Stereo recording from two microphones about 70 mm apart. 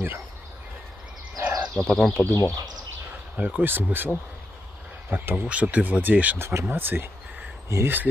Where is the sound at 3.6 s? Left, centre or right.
Right.